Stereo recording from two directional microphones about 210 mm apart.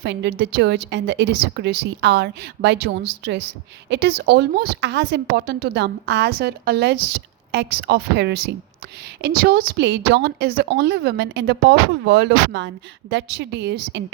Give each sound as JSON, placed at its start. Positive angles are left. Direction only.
{"t": 0.0, "sound": "a woman's voice", "side_deg": -55}